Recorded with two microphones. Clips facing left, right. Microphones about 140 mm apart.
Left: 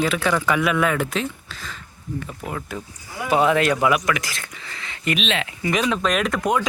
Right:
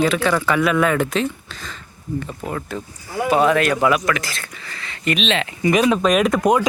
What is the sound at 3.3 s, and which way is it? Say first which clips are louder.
Speech: right 1 dB; 20° left (ahead or behind).